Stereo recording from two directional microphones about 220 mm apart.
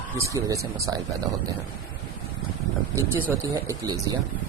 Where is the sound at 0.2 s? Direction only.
15° right (ahead or behind).